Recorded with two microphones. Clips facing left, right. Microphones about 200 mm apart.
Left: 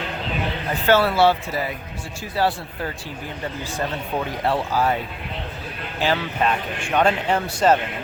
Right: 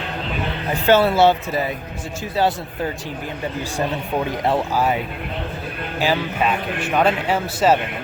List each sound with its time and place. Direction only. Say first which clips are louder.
0.9 s speech: right 2 dB; 20° right (ahead or behind)
4.4 s speech: right 1 dB; 15° right (ahead or behind)
6.0 s speech: right 1 dB; 10° right (ahead or behind)